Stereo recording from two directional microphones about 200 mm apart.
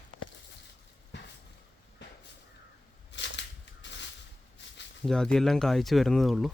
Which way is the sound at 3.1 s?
60° left (ahead or behind).